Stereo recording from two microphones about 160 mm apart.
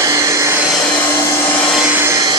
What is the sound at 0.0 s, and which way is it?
Vacuum cleaner, 20° right (ahead or behind).